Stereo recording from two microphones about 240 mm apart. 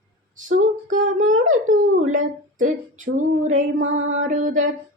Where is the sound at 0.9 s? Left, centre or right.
Right.